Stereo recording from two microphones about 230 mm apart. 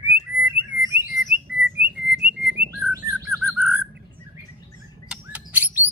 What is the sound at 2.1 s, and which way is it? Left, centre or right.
Whistling, right.